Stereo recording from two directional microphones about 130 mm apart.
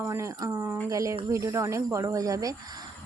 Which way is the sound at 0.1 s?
25° right (ahead or behind).